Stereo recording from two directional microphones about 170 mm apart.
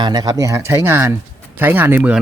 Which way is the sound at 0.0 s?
25° right (ahead or behind).